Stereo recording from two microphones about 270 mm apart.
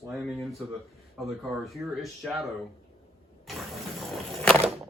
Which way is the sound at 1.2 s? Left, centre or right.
Centre.